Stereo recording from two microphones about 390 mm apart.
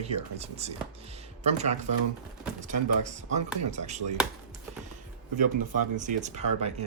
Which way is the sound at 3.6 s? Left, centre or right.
Centre.